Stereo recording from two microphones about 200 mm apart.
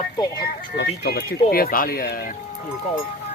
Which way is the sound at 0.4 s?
55° left (ahead or behind).